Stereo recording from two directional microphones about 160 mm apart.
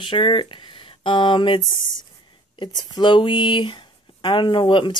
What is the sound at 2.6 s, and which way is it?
A woman's voice, 25° left (ahead or behind).